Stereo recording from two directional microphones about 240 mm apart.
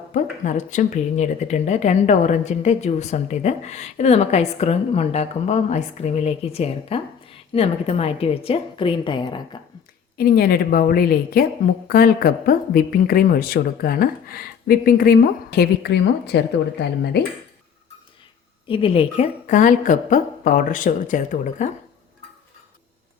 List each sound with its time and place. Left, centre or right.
0.1 s a woman's voice: left
10.2 s a woman's voice: left
18.7 s a woman's voice: left